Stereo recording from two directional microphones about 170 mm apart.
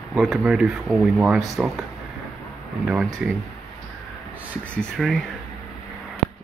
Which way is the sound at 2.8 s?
5° right (ahead or behind).